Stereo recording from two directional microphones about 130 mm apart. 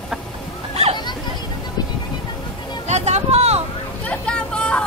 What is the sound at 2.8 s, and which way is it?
Vehicle, 60° right (ahead or behind).